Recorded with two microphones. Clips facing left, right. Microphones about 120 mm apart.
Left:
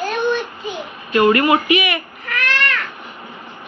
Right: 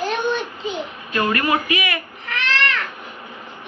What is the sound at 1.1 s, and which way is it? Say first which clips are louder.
Speech: left 6 dB; 25° left (ahead or behind).